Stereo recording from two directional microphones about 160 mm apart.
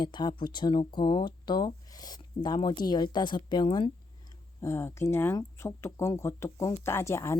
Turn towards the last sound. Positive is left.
turn(degrees=20)  # may be behind; listen again after turning